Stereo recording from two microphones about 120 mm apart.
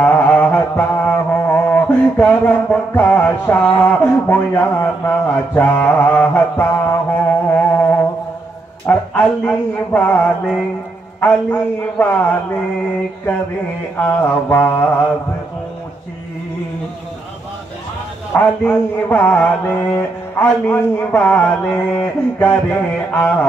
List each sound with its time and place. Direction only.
0.0 s music: 15° left (ahead or behind)
8.8 s mantra: 15° left (ahead or behind)
13.9 s mantra: 15° left (ahead or behind)
18.3 s mantra: 15° left (ahead or behind)